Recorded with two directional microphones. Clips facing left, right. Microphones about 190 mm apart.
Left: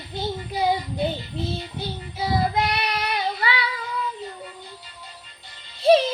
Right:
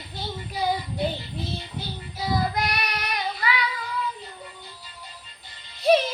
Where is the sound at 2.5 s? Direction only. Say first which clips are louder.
Left 4 dB; 25° left (ahead or behind).